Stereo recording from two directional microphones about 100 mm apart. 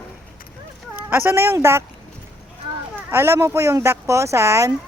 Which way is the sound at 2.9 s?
25° right (ahead or behind).